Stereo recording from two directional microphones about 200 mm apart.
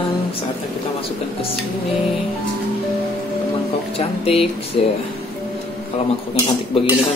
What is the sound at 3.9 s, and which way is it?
Speech, 30° left (ahead or behind).